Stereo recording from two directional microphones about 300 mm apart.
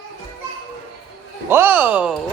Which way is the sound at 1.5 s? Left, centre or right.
Centre.